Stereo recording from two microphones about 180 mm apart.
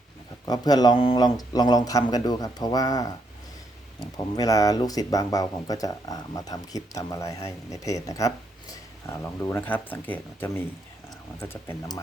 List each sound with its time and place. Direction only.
0.4 s speech: 20° left (ahead or behind)
4.4 s speech: 20° left (ahead or behind)